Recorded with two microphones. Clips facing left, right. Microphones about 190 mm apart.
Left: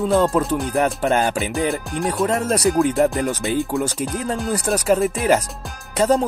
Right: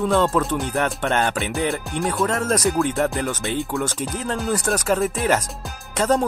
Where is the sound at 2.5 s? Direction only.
35° left (ahead or behind).